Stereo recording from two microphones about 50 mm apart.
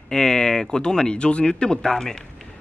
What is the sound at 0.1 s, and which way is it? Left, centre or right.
Speech, centre.